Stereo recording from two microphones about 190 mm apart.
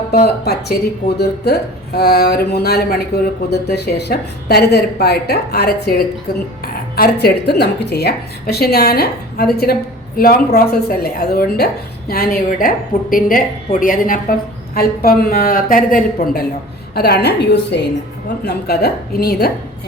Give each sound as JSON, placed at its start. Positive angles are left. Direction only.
{"t": 0.1, "sound": "a woman's voice", "side_deg": 55}